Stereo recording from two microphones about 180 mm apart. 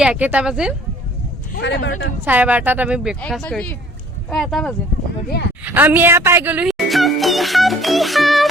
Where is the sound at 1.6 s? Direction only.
70° left (ahead or behind).